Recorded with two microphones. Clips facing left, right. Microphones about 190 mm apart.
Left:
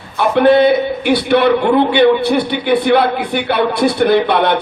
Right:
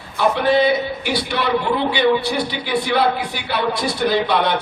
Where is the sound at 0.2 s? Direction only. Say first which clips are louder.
Left 6 dB; 55° left (ahead or behind).